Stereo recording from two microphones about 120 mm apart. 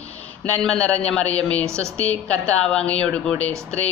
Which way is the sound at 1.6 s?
25° right (ahead or behind).